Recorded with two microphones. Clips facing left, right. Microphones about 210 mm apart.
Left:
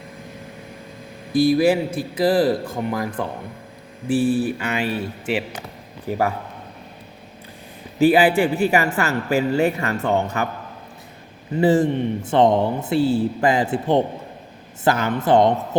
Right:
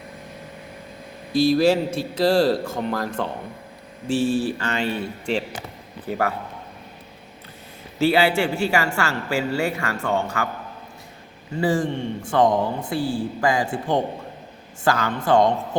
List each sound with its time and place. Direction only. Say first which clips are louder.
1.3 s speech: left 2 dB; 50° left (ahead or behind)
1.5 s speech: left 1 dB; 15° left (ahead or behind)
4.4 s speech: left 1 dB; 15° left (ahead or behind)
7.9 s a man's voice: left 4 dB; 15° left (ahead or behind)
11.5 s a man's voice: left 5 dB; 20° left (ahead or behind)